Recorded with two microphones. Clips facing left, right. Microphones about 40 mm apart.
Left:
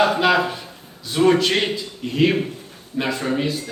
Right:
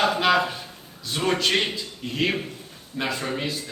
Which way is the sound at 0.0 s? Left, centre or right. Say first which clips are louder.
Left 3 dB; centre.